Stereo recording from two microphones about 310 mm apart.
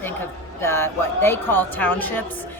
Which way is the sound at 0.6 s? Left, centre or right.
Centre.